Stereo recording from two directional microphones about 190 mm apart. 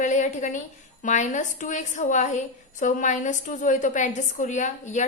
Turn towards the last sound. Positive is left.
turn(degrees=40)  # may be behind; listen again after turning